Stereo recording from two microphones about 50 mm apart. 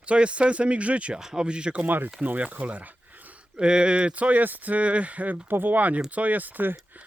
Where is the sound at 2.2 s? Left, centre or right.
Right.